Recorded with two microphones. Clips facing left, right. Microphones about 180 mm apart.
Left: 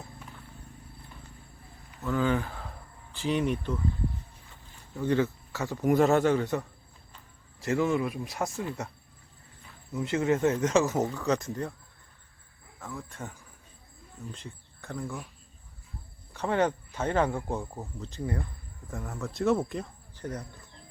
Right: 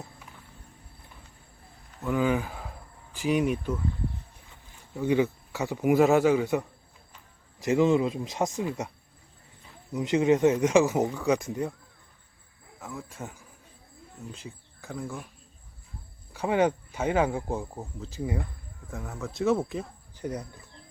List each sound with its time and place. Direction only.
2.0 s speech: 10° right (ahead or behind)
4.9 s speech: 10° right (ahead or behind)
12.8 s speech: 10° right (ahead or behind)
14.3 s speech: 5° right (ahead or behind)
16.3 s speech: 10° right (ahead or behind)